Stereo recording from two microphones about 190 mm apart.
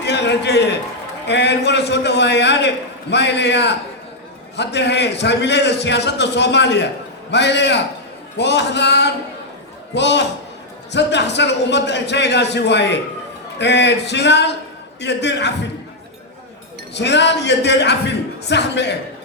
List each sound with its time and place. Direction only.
0.0 s a sound: 65° left (ahead or behind)
1.3 s a man's voice: 65° left (ahead or behind)
16.9 s a man's voice: 65° left (ahead or behind)